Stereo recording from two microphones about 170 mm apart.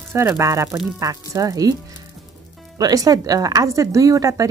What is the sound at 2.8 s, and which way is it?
Speech, 20° right (ahead or behind).